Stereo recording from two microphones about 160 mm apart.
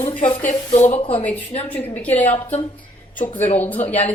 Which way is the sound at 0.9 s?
35° left (ahead or behind).